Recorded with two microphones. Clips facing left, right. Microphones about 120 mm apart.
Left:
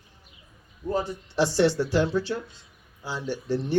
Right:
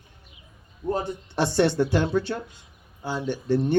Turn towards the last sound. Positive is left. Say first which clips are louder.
# right 4 dB
turn(degrees=-55)  # may be behind; listen again after turning